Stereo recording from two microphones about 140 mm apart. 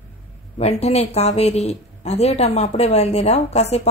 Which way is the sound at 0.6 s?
50° left (ahead or behind).